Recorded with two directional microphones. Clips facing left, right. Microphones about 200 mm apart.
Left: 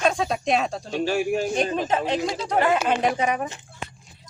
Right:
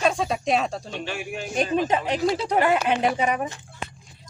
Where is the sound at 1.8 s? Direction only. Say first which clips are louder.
Right 1 dB; 15° right (ahead or behind).